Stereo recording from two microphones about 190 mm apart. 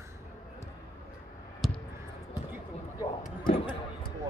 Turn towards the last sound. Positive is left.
turn(degrees=25)  # may be behind; listen again after turning